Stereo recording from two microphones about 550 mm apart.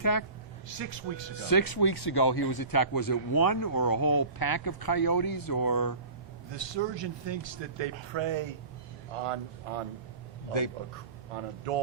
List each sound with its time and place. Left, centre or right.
0.0 s speech: left
0.7 s speech: right
1.4 s speech: left
6.5 s speech: right
9.2 s speech: right
11.3 s speech: right